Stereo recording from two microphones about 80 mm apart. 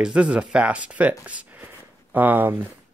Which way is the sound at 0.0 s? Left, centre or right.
Centre.